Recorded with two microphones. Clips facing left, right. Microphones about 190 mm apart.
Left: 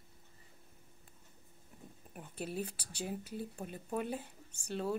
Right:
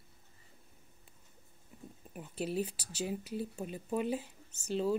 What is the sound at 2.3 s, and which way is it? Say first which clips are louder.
A woman's voice: right 5 dB; 55° left (ahead or behind).